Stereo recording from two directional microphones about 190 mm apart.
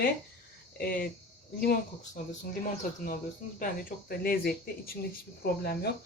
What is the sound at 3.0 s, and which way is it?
Speech, 45° left (ahead or behind).